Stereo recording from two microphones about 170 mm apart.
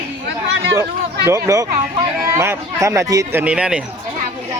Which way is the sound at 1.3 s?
20° right (ahead or behind).